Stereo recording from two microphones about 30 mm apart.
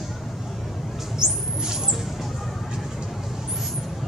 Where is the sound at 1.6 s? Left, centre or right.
Right.